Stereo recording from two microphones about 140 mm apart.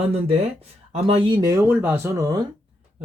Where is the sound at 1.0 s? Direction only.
45° right (ahead or behind).